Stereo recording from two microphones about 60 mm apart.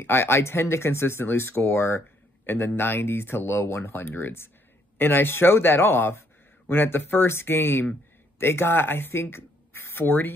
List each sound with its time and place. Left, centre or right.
0.0 s speech: left